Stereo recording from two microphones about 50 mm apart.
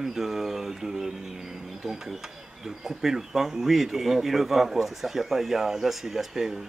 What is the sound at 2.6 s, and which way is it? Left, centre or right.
Speech, centre.